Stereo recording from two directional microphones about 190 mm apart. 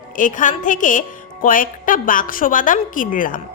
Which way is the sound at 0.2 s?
45° left (ahead or behind).